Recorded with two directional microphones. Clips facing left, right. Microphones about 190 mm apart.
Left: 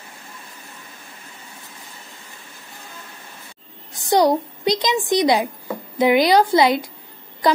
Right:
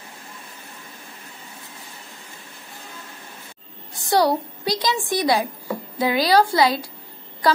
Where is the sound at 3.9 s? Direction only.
20° left (ahead or behind).